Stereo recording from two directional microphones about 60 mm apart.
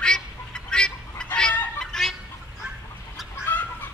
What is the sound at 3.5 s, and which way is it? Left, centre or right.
Chicken, left.